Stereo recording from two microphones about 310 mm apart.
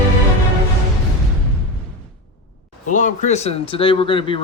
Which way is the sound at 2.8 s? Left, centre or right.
Left.